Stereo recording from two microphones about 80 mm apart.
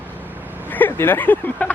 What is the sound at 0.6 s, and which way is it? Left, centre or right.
Speech, left.